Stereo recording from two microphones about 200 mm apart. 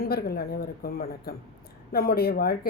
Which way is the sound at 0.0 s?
50° left (ahead or behind).